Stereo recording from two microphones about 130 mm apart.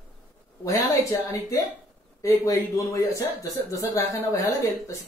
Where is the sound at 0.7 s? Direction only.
25° left (ahead or behind).